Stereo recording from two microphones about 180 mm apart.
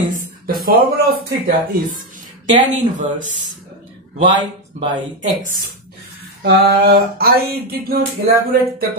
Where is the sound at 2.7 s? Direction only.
45° right (ahead or behind).